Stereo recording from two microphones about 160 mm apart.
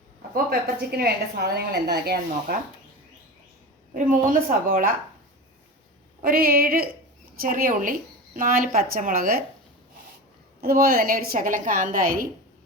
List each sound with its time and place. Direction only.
0.3 s a woman's voice: 70° right (ahead or behind)
4.1 s a woman's voice: 60° right (ahead or behind)
6.2 s a woman's voice: 65° right (ahead or behind)
10.6 s a woman's voice: 75° right (ahead or behind)